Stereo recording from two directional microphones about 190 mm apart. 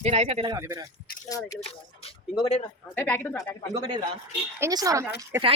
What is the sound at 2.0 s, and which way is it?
Speech, 25° left (ahead or behind).